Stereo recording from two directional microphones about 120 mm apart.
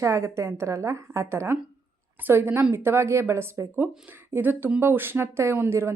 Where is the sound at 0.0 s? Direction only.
25° right (ahead or behind).